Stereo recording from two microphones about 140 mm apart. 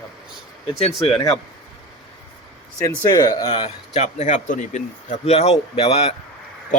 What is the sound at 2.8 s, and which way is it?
Speech, 30° left (ahead or behind).